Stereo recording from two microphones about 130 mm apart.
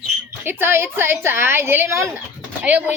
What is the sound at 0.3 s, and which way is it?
A woman's voice, 15° right (ahead or behind).